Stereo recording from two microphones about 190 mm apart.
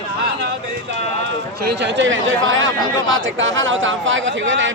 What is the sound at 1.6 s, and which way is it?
Speech, 65° right (ahead or behind).